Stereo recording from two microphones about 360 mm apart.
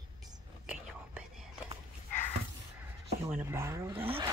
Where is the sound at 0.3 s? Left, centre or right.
Centre.